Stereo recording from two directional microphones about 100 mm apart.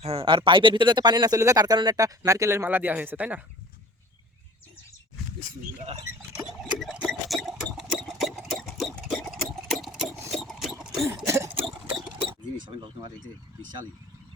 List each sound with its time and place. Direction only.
0.0 s speech: 75° right (ahead or behind); by 2.6 s 30° right (ahead or behind)
2.6 s speech: 20° right (ahead or behind)
6.7 s a sound: 5° right (ahead or behind)
9.5 s sewing machine: centre (ahead or behind)
11.3 s a sound: 25° right (ahead or behind)
12.6 s speech: 50° right (ahead or behind)